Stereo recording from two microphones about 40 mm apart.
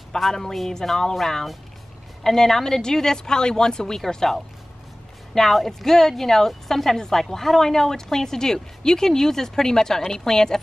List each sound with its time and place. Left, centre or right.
0.2 s speech: centre